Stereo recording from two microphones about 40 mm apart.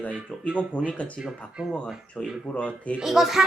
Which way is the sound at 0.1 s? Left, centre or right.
Right.